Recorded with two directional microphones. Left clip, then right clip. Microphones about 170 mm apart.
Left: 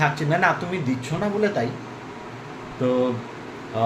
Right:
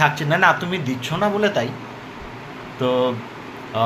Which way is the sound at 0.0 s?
Centre (ahead or behind).